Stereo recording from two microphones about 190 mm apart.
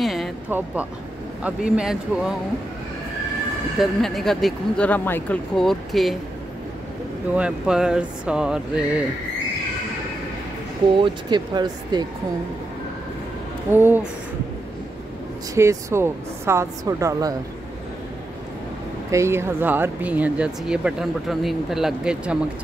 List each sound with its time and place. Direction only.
0.0 s music: centre (ahead or behind)
0.5 s speech: 10° right (ahead or behind)
4.0 s speech: centre (ahead or behind)
7.3 s speech: 5° right (ahead or behind)
11.0 s speech: 25° right (ahead or behind)
13.7 s speech: 10° right (ahead or behind)
15.5 s speech: 15° right (ahead or behind)
19.0 s speech: 15° right (ahead or behind)